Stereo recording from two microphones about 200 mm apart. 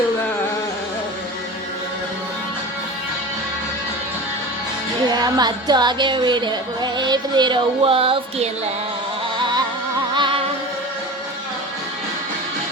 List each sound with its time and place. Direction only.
5.1 s music: 20° right (ahead or behind)